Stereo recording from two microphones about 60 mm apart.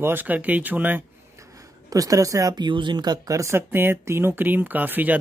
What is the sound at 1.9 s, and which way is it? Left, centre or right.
Speech, right.